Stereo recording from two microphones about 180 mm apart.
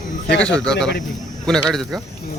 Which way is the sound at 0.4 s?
5° left (ahead or behind).